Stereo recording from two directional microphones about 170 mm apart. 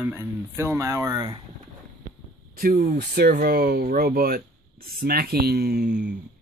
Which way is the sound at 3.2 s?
65° right (ahead or behind).